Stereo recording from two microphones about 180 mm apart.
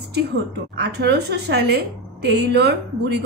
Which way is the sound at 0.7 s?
65° right (ahead or behind).